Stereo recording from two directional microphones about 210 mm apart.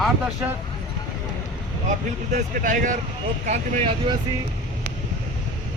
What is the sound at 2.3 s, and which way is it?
Speech, 35° right (ahead or behind).